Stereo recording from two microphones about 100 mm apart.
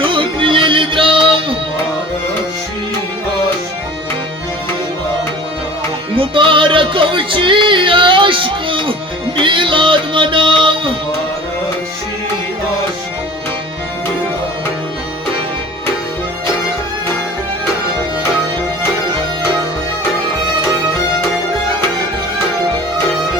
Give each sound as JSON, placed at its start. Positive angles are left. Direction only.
{"t": 0.0, "sound": "music", "side_deg": -60}
{"t": 6.1, "sound": "music", "side_deg": -60}